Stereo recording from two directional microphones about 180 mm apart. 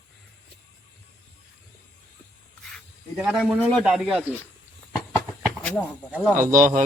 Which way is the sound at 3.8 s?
Centre (ahead or behind).